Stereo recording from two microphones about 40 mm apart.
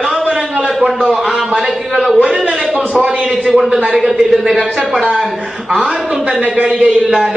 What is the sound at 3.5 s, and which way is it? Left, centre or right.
A man's voice, centre.